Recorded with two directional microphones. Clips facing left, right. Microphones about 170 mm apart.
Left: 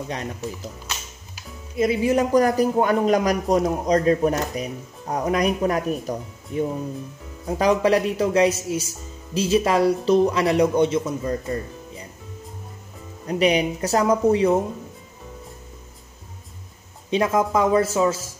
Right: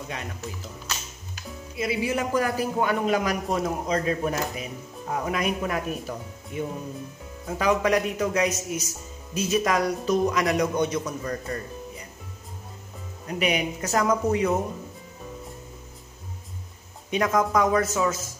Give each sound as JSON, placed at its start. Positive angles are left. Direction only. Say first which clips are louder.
{"t": 1.8, "sound": "a man's voice", "louder": "left 7 dB", "side_deg": 40}
{"t": 13.3, "sound": "a man's voice", "louder": "left 6 dB", "side_deg": 35}
{"t": 17.1, "sound": "a man's voice", "louder": "left 3 dB", "side_deg": 25}